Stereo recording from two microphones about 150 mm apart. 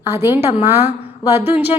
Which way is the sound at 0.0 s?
20° right (ahead or behind).